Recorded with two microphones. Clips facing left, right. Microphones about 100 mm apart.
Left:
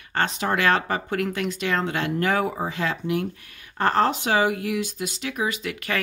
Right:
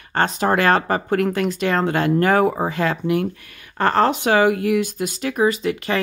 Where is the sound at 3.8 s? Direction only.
70° right (ahead or behind).